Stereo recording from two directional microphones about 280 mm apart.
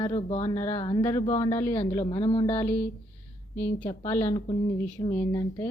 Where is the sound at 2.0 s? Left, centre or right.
Left.